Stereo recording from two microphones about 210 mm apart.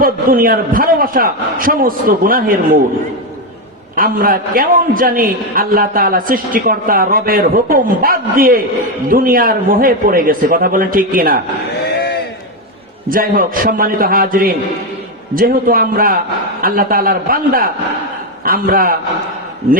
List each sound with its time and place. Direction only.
0.0 s a man's voice: 45° right (ahead or behind)
3.9 s a man's voice: 45° right (ahead or behind)
11.9 s a sound: 50° left (ahead or behind)
13.1 s a man's voice: 40° right (ahead or behind)